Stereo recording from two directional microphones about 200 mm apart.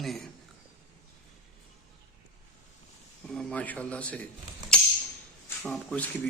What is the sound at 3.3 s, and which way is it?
Speech, 5° left (ahead or behind).